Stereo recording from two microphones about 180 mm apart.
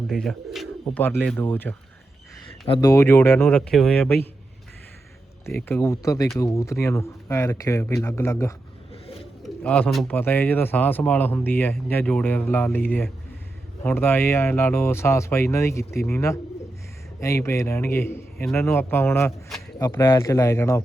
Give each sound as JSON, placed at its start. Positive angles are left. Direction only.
{"t": 0.1, "sound": "speech", "side_deg": 0}
{"t": 1.0, "sound": "speech", "side_deg": 10}
{"t": 2.6, "sound": "speech", "side_deg": 30}
{"t": 2.9, "sound": "speech", "side_deg": 15}
{"t": 5.5, "sound": "speech", "side_deg": 5}